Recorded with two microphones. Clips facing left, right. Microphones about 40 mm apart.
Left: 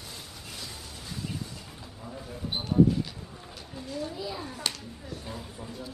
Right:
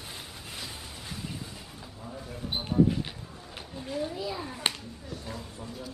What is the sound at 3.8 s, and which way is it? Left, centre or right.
Speech, right.